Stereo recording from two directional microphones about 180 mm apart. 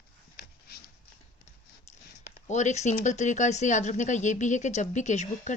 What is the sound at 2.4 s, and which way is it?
Speech, 40° left (ahead or behind).